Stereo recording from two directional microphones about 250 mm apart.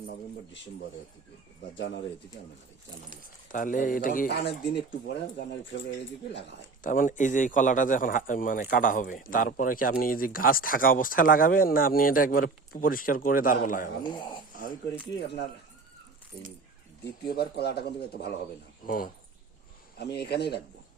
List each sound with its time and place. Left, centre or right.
1.7 s speech: left
3.5 s a man's voice: left
6.8 s a man's voice: left
14.0 s speech: centre
14.5 s speech: left
17.2 s a man's voice: left